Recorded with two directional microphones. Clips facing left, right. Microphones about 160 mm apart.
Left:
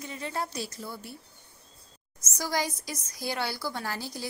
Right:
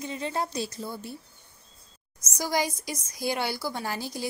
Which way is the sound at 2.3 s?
15° right (ahead or behind).